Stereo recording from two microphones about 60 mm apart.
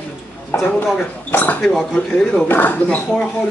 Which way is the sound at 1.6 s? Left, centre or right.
Centre.